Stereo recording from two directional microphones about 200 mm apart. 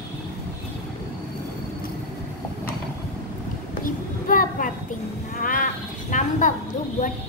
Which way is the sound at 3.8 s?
45° left (ahead or behind).